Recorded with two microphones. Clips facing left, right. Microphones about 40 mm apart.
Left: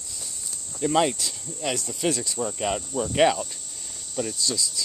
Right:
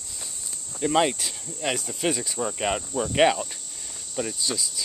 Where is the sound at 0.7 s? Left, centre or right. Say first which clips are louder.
Even; centre.